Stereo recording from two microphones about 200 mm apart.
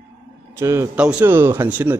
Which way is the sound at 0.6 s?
15° right (ahead or behind).